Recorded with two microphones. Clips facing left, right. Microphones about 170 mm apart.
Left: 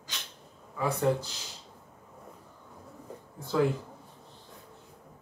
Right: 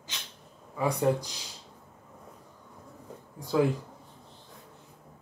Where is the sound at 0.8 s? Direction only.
15° right (ahead or behind).